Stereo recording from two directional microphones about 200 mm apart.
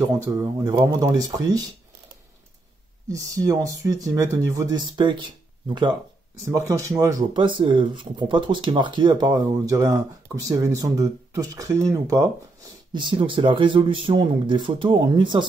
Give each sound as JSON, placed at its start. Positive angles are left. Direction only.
{"t": 0.0, "sound": "speech", "side_deg": -15}
{"t": 3.1, "sound": "speech", "side_deg": -15}